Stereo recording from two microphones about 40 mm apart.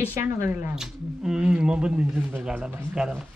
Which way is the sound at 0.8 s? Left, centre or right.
Centre.